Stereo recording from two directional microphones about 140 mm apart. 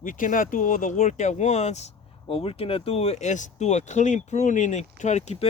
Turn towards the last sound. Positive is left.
turn(degrees=55)  # may be behind; listen again after turning